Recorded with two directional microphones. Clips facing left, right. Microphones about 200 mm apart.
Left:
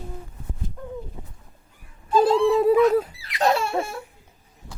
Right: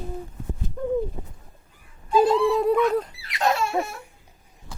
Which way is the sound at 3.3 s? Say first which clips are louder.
Left 1 dB; 30° left (ahead or behind).